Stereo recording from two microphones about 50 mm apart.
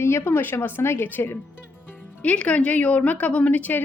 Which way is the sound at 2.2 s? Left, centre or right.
Left.